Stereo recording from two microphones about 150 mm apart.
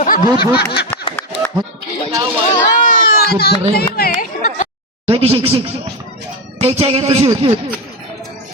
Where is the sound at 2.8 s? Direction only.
70° left (ahead or behind).